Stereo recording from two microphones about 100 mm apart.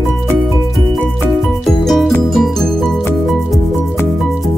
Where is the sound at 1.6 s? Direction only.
Centre (ahead or behind).